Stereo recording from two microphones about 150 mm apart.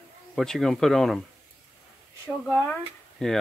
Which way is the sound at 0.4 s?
Centre (ahead or behind).